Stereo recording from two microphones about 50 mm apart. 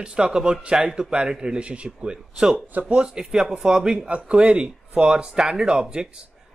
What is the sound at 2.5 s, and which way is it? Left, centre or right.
Speech, right.